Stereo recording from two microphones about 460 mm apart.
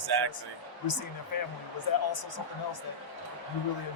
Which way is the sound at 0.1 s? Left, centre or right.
Right.